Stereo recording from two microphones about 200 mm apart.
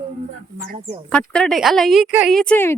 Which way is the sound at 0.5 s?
45° right (ahead or behind).